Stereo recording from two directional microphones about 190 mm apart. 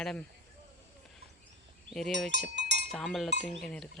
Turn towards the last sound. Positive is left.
turn(degrees=5)  # may be behind; listen again after turning